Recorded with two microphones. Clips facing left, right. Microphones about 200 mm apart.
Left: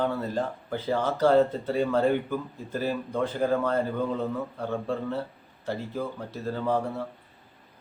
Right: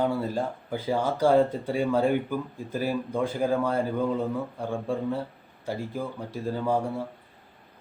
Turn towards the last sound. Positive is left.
turn(degrees=-10)  # may be behind; listen again after turning